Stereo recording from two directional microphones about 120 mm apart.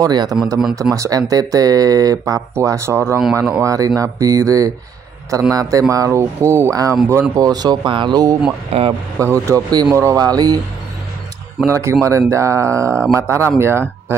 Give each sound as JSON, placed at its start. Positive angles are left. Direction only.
{"t": 0.0, "sound": "speech", "side_deg": -35}
{"t": 8.7, "sound": "speech", "side_deg": -60}
{"t": 9.2, "sound": "speech", "side_deg": -25}
{"t": 11.6, "sound": "speech", "side_deg": -25}